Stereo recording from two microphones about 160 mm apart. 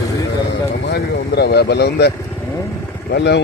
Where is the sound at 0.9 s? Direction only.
90° left.